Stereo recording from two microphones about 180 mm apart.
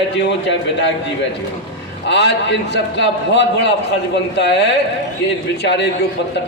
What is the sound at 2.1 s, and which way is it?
A man's voice, 75° left (ahead or behind).